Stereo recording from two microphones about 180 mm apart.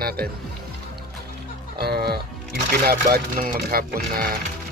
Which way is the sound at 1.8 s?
60° right (ahead or behind).